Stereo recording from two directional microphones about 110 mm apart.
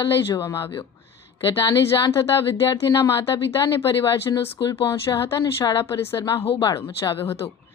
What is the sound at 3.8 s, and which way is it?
Speech, 45° left (ahead or behind).